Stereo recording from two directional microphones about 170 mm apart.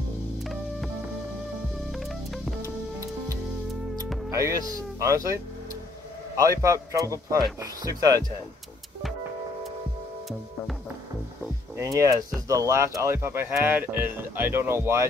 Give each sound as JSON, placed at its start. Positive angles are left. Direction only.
{"t": 1.9, "sound": "music", "side_deg": 0}
{"t": 4.3, "sound": "speech", "side_deg": -20}
{"t": 11.7, "sound": "speech", "side_deg": -20}